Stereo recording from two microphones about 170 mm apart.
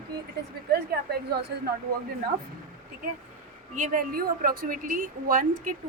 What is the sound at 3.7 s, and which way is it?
A woman's voice, 50° right (ahead or behind).